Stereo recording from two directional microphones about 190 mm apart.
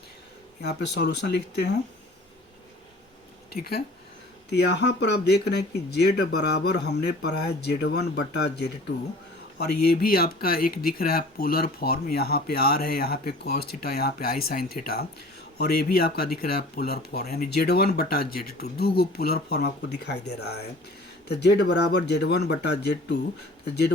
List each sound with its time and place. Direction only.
0.6 s speech: 60° left (ahead or behind)
3.5 s speech: 55° left (ahead or behind)